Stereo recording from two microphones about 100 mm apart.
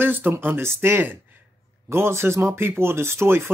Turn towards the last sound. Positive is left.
turn(degrees=-25)  # may be behind; listen again after turning